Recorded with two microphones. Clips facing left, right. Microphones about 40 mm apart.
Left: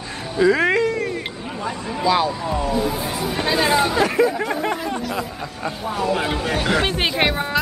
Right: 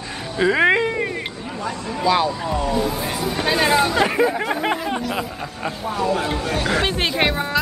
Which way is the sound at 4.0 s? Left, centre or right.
Centre.